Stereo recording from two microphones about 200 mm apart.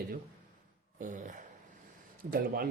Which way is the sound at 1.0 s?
40° right (ahead or behind).